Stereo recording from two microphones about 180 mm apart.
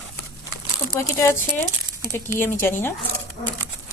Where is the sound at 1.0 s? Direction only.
15° left (ahead or behind).